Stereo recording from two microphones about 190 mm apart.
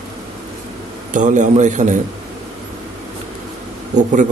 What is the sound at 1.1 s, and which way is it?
Speech, 40° right (ahead or behind).